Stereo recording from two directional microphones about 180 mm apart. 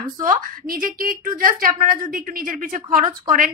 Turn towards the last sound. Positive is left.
turn(degrees=-50)  # may be behind; listen again after turning